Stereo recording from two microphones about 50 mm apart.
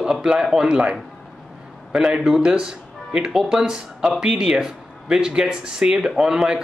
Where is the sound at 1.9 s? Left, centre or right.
Centre.